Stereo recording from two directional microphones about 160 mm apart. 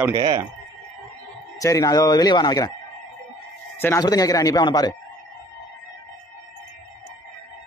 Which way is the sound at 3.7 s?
15° left (ahead or behind).